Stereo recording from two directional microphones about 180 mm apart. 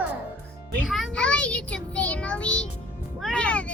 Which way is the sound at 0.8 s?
Centre (ahead or behind).